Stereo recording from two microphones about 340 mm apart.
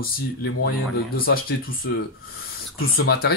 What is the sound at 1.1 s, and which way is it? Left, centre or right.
Speech, left.